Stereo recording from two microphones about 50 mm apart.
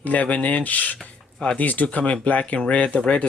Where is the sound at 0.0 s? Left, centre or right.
Left.